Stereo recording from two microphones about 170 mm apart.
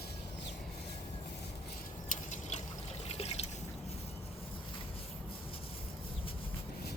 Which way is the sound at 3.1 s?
35° left (ahead or behind).